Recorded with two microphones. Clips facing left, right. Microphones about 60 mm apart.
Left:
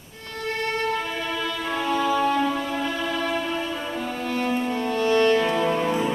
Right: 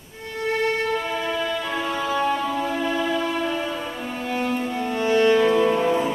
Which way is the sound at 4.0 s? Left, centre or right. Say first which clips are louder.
Even; centre.